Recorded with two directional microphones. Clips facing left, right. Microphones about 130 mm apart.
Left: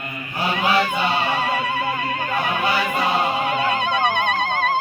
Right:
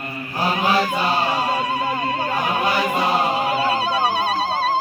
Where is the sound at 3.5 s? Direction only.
35° right (ahead or behind).